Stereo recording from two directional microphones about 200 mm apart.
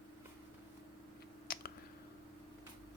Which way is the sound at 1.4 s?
50° left (ahead or behind).